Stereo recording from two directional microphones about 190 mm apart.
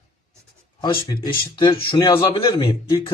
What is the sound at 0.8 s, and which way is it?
Speech, 25° left (ahead or behind).